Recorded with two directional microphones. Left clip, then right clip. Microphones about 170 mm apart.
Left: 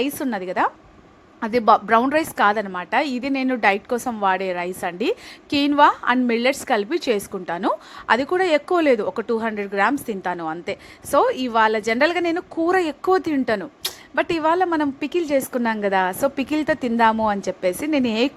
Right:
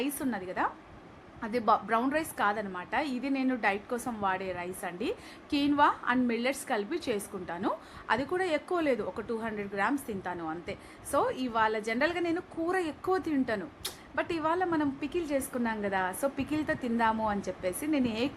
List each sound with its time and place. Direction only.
0.0 s a woman's voice: 55° left (ahead or behind)